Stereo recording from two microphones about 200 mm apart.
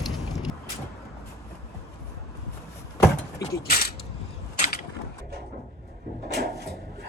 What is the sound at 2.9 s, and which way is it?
Door, 15° left (ahead or behind).